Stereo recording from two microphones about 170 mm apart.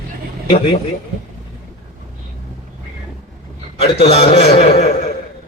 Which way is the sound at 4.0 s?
40° left (ahead or behind).